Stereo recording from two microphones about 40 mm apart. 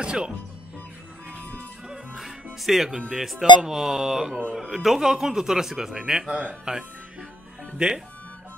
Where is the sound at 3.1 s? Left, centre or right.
Centre.